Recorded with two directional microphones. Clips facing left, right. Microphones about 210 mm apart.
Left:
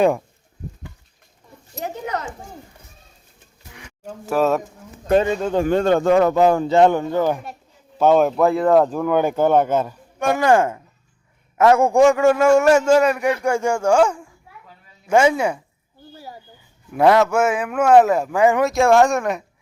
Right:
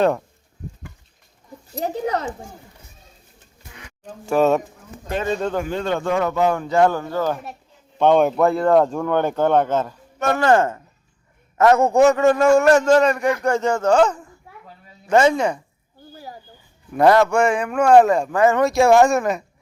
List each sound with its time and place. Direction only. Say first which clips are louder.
1.8 s speech: right 4 dB; 35° right (ahead or behind)
4.0 s a man's voice: right 2 dB; centre (ahead or behind)
5.6 s speech: left 6 dB; 50° left (ahead or behind); by 7.4 s 15° left (ahead or behind)
7.9 s speech: even; 5° left (ahead or behind)
16.9 s a man's voice: even; centre (ahead or behind)
18.6 s a man's voice: right 3 dB; centre (ahead or behind)